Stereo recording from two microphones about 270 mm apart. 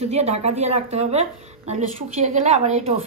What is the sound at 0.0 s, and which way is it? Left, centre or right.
A woman's voice, right.